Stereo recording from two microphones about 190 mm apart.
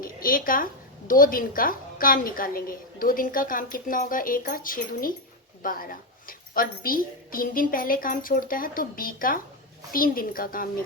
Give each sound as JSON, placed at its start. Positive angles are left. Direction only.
{"t": 0.0, "sound": "a woman's voice", "side_deg": 50}